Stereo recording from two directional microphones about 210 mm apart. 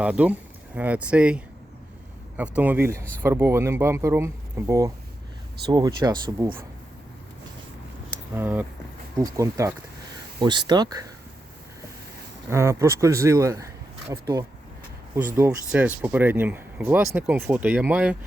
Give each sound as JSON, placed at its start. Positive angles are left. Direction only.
{"t": 0.0, "sound": "speech", "side_deg": -5}
{"t": 8.4, "sound": "speech", "side_deg": -10}
{"t": 12.5, "sound": "speech", "side_deg": -15}